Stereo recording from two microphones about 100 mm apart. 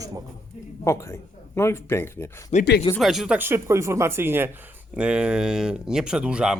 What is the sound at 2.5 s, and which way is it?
Speech, 90° left.